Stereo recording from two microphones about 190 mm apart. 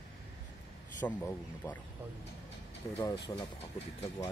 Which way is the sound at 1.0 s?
10° left (ahead or behind).